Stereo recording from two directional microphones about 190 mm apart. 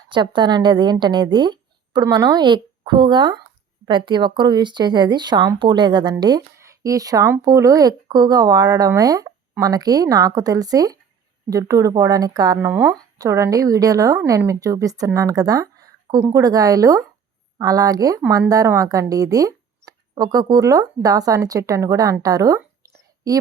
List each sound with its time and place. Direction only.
0.1 s speech: 25° right (ahead or behind)